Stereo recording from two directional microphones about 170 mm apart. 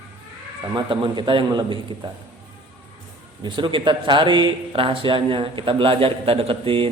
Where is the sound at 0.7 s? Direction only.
30° right (ahead or behind).